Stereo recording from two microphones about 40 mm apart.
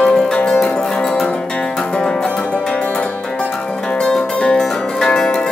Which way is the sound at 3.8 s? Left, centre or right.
Left.